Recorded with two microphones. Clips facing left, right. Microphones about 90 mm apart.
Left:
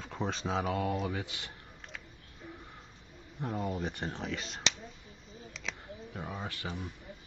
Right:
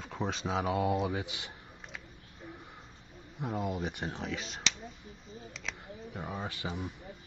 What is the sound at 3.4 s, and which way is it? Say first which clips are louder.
Speech: right 1 dB; 5° right (ahead or behind).